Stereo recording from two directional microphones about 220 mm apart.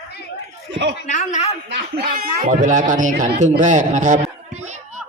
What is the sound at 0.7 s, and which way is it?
Chuckle, 50° right (ahead or behind).